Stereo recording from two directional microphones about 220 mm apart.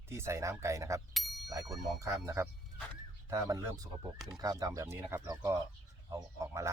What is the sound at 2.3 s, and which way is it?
Speech, 15° right (ahead or behind).